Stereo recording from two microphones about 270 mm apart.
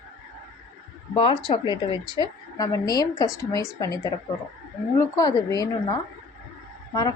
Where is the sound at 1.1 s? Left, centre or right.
Centre.